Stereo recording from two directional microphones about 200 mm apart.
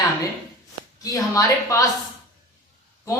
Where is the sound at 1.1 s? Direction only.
15° left (ahead or behind).